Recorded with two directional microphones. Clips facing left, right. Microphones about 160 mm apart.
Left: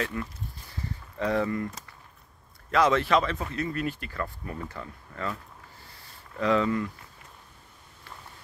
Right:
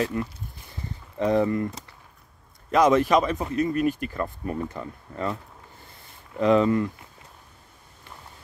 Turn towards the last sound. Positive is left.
turn(degrees=-25)  # may be behind; listen again after turning